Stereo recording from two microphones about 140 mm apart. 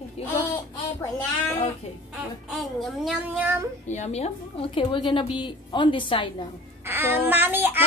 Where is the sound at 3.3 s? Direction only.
15° right (ahead or behind).